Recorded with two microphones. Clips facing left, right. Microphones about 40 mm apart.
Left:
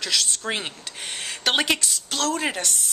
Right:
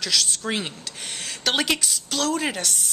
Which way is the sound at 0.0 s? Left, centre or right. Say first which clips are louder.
Even; centre.